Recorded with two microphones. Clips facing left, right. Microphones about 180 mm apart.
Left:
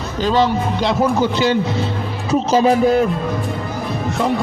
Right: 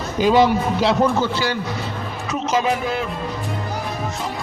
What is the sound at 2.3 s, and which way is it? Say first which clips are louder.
Speech: left 7 dB; 35° left (ahead or behind).